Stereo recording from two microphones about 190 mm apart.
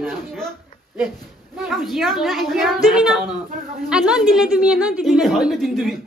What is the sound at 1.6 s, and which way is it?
Speech, centre (ahead or behind).